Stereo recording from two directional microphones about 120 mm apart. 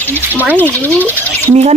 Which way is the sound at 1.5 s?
65° right (ahead or behind).